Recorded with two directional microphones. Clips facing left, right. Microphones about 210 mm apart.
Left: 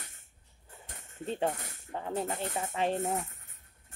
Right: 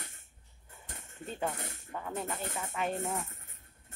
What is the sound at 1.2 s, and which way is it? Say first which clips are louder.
Speech: left 4 dB; 30° left (ahead or behind).